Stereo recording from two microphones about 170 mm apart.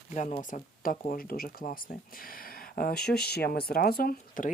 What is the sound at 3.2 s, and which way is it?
Speech, 65° left (ahead or behind).